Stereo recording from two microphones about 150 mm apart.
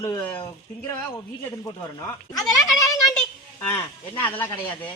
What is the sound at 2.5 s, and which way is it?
A woman's voice, 20° left (ahead or behind).